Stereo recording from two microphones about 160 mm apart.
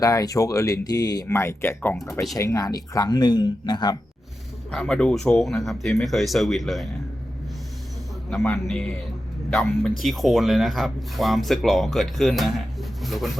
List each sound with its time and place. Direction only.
0.0 s speech: 20° left (ahead or behind)
4.7 s speech: 5° left (ahead or behind)
8.5 s speech: centre (ahead or behind)